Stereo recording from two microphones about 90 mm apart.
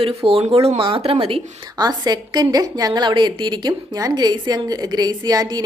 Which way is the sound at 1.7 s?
50° right (ahead or behind).